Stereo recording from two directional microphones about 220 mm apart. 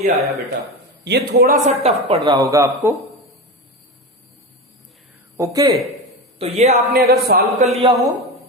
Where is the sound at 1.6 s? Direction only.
30° right (ahead or behind).